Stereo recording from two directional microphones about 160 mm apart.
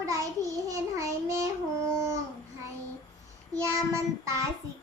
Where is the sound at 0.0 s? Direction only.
20° right (ahead or behind).